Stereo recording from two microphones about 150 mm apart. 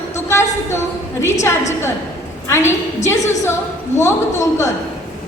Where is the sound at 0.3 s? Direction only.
20° left (ahead or behind).